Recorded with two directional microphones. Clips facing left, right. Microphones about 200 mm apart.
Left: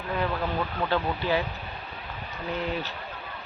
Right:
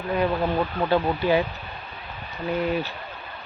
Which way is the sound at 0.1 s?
15° right (ahead or behind).